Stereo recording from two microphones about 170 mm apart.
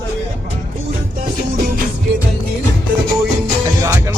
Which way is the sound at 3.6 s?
15° right (ahead or behind).